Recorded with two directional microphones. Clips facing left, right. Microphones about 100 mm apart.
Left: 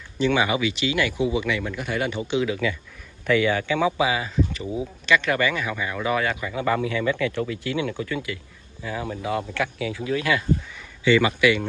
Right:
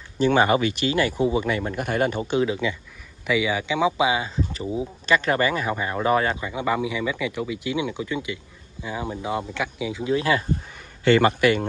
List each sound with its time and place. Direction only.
0.2 s speech: 45° right (ahead or behind)
2.4 s speech: 25° right (ahead or behind)
3.3 s speech: 10° right (ahead or behind); by 6.5 s 30° right (ahead or behind)
6.5 s speech: 15° right (ahead or behind)
10.7 s a sound: 45° right (ahead or behind)